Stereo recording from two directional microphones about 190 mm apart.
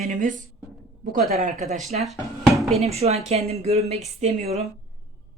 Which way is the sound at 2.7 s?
35° right (ahead or behind).